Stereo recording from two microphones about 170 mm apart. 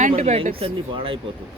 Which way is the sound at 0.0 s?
45° right (ahead or behind).